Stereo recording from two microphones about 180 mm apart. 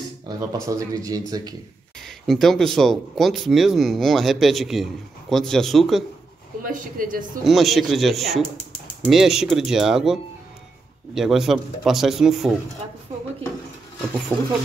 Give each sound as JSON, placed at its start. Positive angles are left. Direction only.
{"t": 0.7, "sound": "speech", "side_deg": -20}
{"t": 2.0, "sound": "speech", "side_deg": 0}
{"t": 6.6, "sound": "speech", "side_deg": -50}
{"t": 7.4, "sound": "speech", "side_deg": 0}
{"t": 11.1, "sound": "speech", "side_deg": 0}
{"t": 14.3, "sound": "speech", "side_deg": -10}